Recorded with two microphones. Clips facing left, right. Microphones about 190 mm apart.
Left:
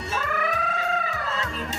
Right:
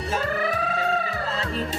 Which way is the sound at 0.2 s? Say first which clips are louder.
Right 1 dB; 35° right (ahead or behind).